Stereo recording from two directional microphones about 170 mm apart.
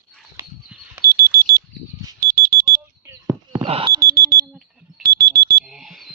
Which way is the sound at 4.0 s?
65° right (ahead or behind).